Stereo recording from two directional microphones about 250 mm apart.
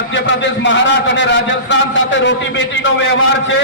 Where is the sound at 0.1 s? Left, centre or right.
Left.